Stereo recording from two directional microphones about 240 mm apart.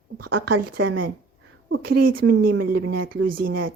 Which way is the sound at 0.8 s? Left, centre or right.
Right.